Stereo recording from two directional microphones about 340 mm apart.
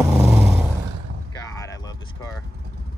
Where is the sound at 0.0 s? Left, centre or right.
Centre.